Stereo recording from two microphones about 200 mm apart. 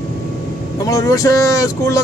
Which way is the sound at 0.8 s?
15° left (ahead or behind).